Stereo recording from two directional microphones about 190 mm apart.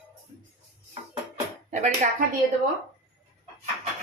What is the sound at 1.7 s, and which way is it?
Speech, 40° right (ahead or behind).